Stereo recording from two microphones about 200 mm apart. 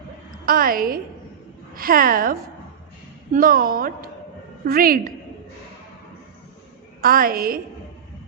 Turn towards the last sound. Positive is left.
turn(degrees=-45)  # may be behind; listen again after turning